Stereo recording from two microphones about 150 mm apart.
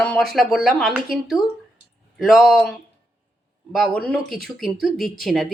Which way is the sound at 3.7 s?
Centre (ahead or behind).